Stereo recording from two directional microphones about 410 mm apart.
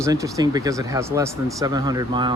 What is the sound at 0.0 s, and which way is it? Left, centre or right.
Speech, centre.